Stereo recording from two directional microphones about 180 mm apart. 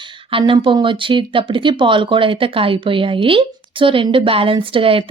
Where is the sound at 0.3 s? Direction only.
30° right (ahead or behind).